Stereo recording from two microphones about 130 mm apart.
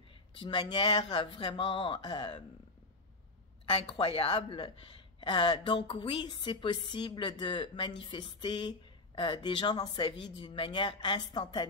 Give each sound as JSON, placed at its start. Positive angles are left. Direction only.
{"t": 0.4, "sound": "a woman's voice", "side_deg": 40}
{"t": 3.6, "sound": "a woman's voice", "side_deg": 50}